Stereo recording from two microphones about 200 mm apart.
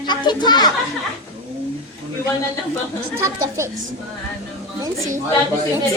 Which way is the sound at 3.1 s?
15° right (ahead or behind).